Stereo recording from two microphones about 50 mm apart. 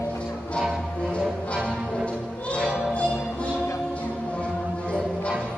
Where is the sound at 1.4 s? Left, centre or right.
Left.